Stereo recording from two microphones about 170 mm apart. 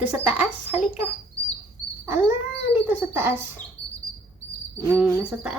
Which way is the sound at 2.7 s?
10° right (ahead or behind).